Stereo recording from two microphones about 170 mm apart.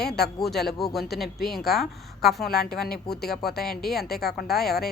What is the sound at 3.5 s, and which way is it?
A woman's voice, centre (ahead or behind).